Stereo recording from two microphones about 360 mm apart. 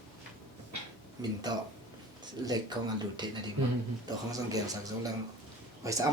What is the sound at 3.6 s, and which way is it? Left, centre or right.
Speech, right.